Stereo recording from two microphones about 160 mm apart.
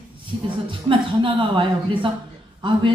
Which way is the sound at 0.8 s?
30° right (ahead or behind).